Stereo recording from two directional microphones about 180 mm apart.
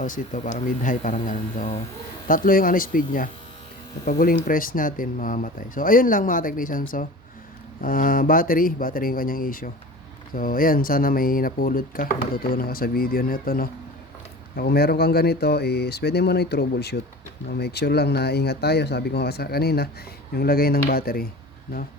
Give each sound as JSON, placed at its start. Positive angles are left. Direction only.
{"t": 0.0, "sound": "speech", "side_deg": 45}